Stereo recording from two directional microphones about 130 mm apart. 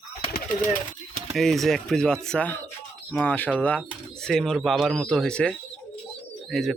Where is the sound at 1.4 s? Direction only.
Centre (ahead or behind).